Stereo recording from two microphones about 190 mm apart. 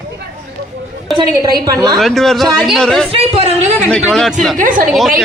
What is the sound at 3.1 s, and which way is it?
Speech, 30° right (ahead or behind).